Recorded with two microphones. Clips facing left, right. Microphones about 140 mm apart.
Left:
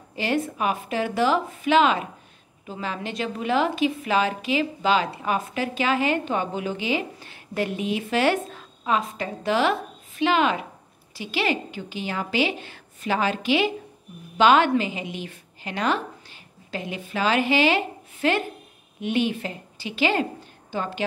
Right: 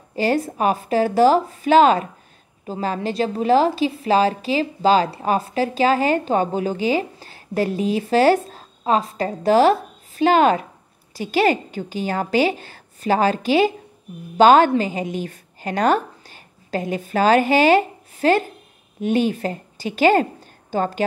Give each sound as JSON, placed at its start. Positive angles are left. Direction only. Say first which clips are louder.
{"t": 0.1, "sound": "a woman's voice", "louder": "right 5 dB", "side_deg": -40}